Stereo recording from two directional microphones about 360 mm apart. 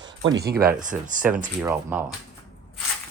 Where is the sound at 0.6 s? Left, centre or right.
Right.